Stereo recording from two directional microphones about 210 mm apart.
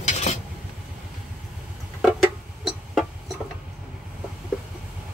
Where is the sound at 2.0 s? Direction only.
Centre (ahead or behind).